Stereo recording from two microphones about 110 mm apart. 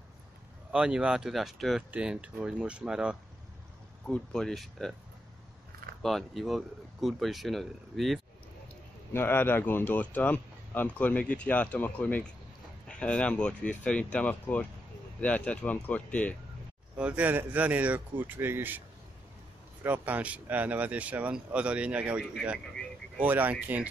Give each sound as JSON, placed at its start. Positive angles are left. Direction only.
{"t": 0.7, "sound": "speech", "side_deg": -5}
{"t": 4.1, "sound": "speech", "side_deg": 5}
{"t": 6.0, "sound": "speech", "side_deg": 0}
{"t": 9.1, "sound": "speech", "side_deg": 20}
{"t": 16.9, "sound": "speech", "side_deg": -10}
{"t": 19.8, "sound": "speech", "side_deg": -15}
{"t": 22.2, "sound": "speech", "side_deg": 0}
{"t": 23.1, "sound": "speech", "side_deg": -15}